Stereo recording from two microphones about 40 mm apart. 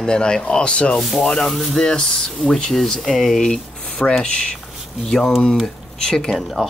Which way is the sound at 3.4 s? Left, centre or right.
Centre.